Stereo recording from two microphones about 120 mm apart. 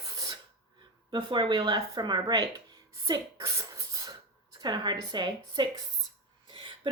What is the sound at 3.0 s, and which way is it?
Cough, 30° right (ahead or behind).